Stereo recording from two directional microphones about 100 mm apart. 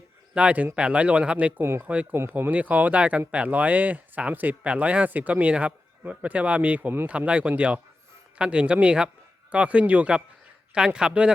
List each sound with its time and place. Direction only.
0.3 s speech: 15° right (ahead or behind)
1.6 s speech: 25° right (ahead or behind)
1.9 s speech: 15° right (ahead or behind)